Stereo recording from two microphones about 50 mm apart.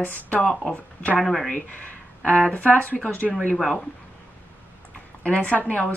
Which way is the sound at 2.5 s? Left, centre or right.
Left.